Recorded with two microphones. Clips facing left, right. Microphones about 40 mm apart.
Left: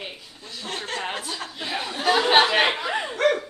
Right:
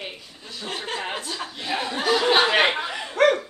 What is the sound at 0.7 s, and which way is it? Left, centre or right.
Speech, right.